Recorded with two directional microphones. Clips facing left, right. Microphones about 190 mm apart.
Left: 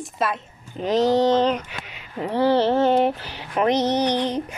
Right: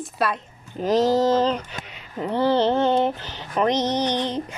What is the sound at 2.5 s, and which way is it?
Speech, 20° right (ahead or behind).